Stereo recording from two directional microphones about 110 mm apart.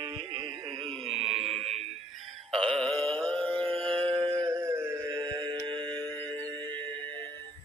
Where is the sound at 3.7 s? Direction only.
55° right (ahead or behind).